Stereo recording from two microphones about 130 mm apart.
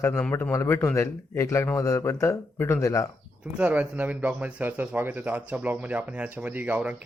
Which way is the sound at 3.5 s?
10° right (ahead or behind).